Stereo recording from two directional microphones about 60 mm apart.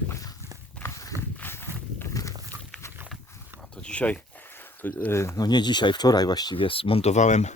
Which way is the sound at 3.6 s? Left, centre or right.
Centre.